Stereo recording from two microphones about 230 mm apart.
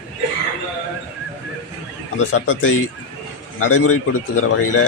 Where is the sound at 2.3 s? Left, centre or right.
Left.